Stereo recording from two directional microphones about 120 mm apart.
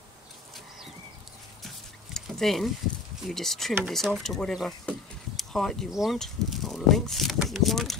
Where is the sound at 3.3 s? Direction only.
Centre (ahead or behind).